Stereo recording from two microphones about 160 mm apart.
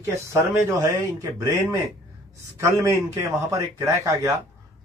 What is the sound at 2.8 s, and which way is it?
Speech, 20° right (ahead or behind).